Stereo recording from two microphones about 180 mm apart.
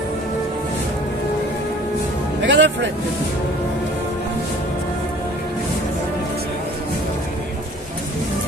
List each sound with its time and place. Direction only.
2.4 s music: 90° right